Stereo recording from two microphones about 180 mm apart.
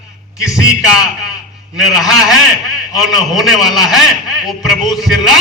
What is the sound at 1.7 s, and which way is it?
A man's voice, centre (ahead or behind).